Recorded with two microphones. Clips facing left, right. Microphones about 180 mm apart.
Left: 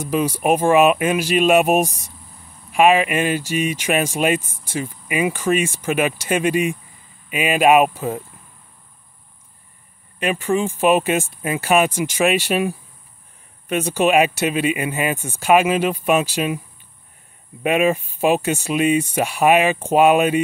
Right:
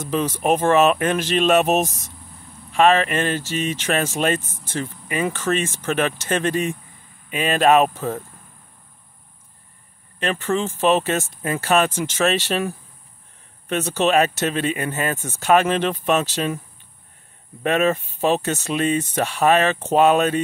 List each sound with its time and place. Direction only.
0.0 s speech: 10° left (ahead or behind)
10.1 s speech: 10° left (ahead or behind)
17.6 s speech: 10° left (ahead or behind)